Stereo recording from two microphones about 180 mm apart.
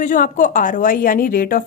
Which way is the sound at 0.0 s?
45° left (ahead or behind).